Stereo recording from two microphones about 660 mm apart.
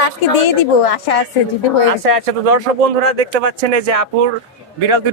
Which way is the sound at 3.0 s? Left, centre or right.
Right.